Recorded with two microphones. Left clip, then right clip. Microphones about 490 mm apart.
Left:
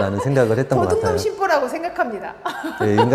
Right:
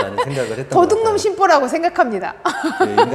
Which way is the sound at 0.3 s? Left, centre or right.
Left.